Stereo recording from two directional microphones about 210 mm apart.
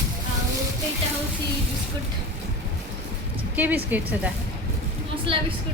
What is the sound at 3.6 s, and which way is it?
Speech, 10° right (ahead or behind).